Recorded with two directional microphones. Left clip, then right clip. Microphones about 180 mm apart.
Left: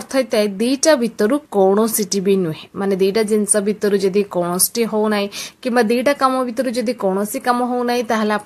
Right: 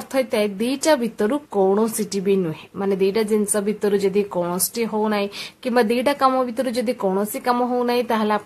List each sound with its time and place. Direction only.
0.1 s speech: 20° left (ahead or behind)